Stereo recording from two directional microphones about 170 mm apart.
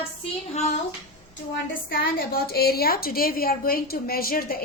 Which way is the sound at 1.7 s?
60° left (ahead or behind).